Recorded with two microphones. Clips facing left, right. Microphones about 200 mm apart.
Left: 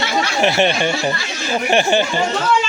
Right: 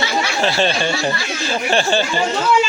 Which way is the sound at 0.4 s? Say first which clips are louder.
Left 3 dB; 20° left (ahead or behind).